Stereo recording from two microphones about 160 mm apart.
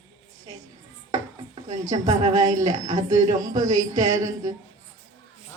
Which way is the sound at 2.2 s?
50° right (ahead or behind).